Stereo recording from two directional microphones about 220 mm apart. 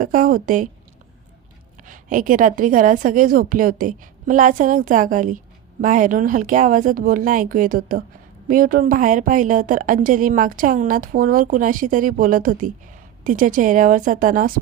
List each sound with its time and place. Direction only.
0.0 s a woman's voice: 40° right (ahead or behind)
1.9 s a woman's voice: 35° right (ahead or behind)